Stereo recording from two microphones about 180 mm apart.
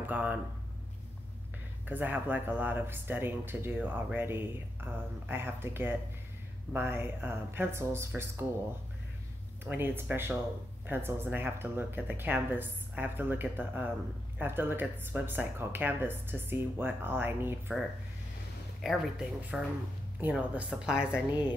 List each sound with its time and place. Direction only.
0.0 s speech: 10° right (ahead or behind)
1.9 s speech: 10° right (ahead or behind)
9.7 s speech: 10° right (ahead or behind)
18.8 s a woman's voice: centre (ahead or behind)